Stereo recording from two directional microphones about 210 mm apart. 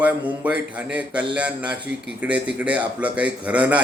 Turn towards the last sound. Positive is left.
turn(degrees=-5)  # may be behind; listen again after turning